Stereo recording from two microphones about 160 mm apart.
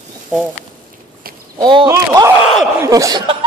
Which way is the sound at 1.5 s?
30° right (ahead or behind).